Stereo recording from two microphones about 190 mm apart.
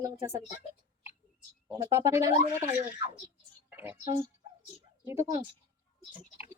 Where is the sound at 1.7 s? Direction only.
15° right (ahead or behind).